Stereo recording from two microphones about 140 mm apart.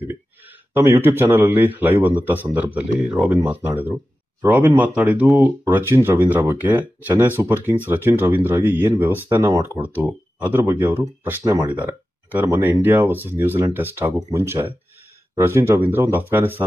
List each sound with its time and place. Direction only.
0.1 s speech: 15° right (ahead or behind)
12.7 s speech: 15° right (ahead or behind)